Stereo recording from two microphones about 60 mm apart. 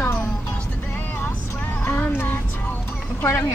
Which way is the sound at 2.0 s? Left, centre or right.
Left.